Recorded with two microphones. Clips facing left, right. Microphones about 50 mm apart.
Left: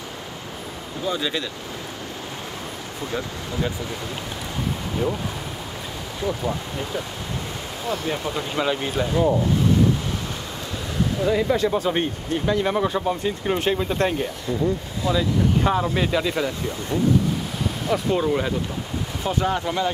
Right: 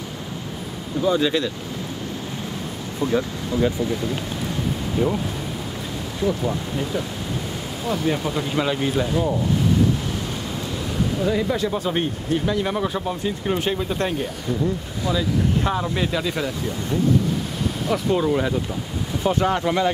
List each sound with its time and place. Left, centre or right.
1.0 s speech: centre
6.2 s speech: centre
11.2 s speech: centre
11.5 s speech: centre
17.8 s speech: centre
19.2 s speech: centre